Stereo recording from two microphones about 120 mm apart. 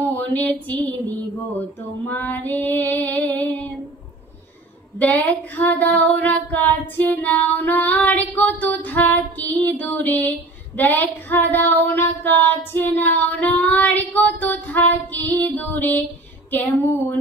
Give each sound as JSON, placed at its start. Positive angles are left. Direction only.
{"t": 0.0, "sound": "a sound", "side_deg": 15}
{"t": 2.0, "sound": "female singing", "side_deg": 15}
{"t": 4.9, "sound": "female singing", "side_deg": 15}